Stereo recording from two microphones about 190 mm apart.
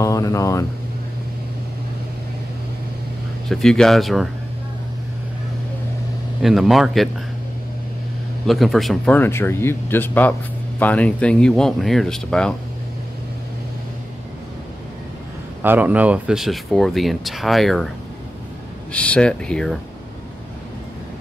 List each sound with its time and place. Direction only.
0.0 s speech: 15° left (ahead or behind)
3.4 s speech: centre (ahead or behind)
6.4 s speech: centre (ahead or behind)
8.5 s speech: centre (ahead or behind)
15.6 s speech: 10° right (ahead or behind)